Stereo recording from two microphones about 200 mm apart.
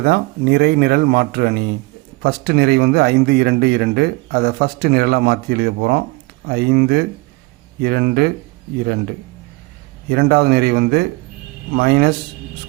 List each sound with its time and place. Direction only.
0.0 s speech: 50° right (ahead or behind)
10.1 s speech: 55° right (ahead or behind)